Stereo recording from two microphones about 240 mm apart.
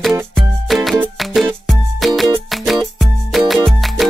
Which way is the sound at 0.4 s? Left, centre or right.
Centre.